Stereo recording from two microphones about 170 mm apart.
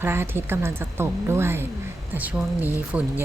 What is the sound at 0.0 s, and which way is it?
A woman's voice, 15° right (ahead or behind).